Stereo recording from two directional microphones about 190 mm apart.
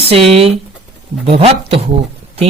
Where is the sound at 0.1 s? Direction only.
30° right (ahead or behind).